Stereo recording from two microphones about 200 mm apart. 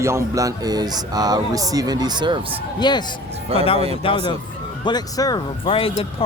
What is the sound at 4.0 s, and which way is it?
Speech, 25° left (ahead or behind).